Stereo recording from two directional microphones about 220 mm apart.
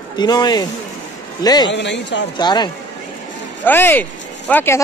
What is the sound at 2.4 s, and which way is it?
Speech, 20° left (ahead or behind).